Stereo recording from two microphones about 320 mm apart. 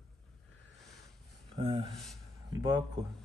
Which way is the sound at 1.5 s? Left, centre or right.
Centre.